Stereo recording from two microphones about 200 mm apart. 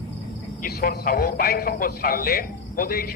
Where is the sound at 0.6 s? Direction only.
50° left (ahead or behind).